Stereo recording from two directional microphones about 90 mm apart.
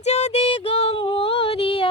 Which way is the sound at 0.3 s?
90° left.